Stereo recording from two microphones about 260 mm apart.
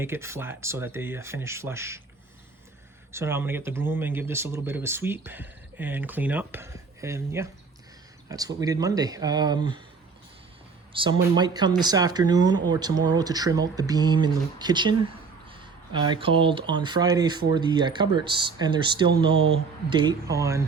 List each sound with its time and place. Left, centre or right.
0.0 s speech: centre
3.1 s speech: centre
10.9 s speech: centre